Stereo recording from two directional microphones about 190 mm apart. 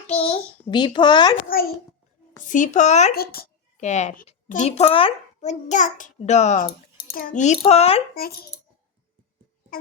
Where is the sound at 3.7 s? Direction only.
35° left (ahead or behind).